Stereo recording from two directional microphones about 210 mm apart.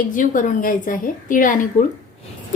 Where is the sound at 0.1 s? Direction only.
40° left (ahead or behind).